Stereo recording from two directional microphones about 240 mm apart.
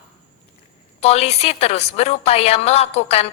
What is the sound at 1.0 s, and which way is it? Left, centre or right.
A woman's voice, left.